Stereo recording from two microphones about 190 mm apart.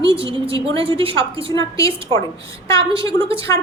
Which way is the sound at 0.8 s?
30° right (ahead or behind).